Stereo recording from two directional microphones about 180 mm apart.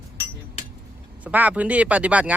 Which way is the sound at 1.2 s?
10° right (ahead or behind).